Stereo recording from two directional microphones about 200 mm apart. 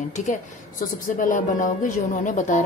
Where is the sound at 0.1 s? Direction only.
40° left (ahead or behind).